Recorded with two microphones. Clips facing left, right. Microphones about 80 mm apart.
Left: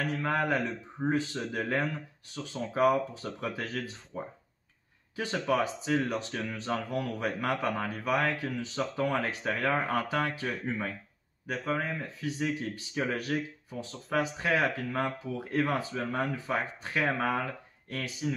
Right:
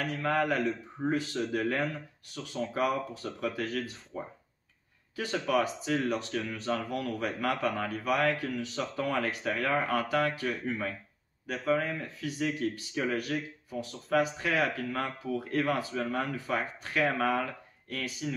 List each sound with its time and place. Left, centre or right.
0.0 s speech: left